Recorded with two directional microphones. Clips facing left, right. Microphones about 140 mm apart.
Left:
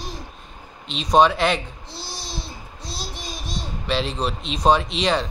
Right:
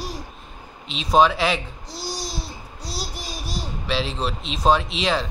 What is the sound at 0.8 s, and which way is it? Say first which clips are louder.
Speech: left 1 dB; 5° right (ahead or behind).